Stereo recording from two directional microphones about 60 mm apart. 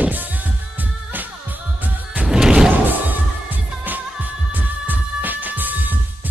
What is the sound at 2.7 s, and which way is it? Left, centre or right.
Music, right.